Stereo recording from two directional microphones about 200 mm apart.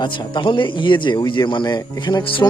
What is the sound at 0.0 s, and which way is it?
Speech, 20° left (ahead or behind).